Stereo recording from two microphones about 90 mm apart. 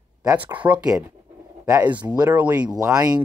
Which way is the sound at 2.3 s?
15° right (ahead or behind).